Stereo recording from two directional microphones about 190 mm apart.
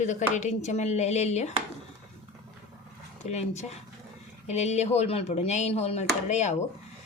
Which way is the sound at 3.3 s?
35° left (ahead or behind).